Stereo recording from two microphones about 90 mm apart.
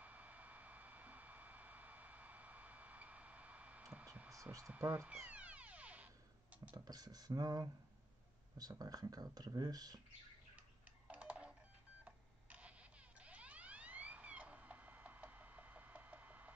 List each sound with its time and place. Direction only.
0.0 s a sound: 15° right (ahead or behind)
4.3 s hum: 35° right (ahead or behind)
4.7 s speech: 20° right (ahead or behind)
5.2 s a sound: 15° right (ahead or behind)
6.5 s computer keyboard: 15° right (ahead or behind)
6.8 s speech: 45° right (ahead or behind)
11.1 s music: 15° right (ahead or behind)
12.0 s telephone dialing: 15° right (ahead or behind)
13.2 s a sound: 15° right (ahead or behind)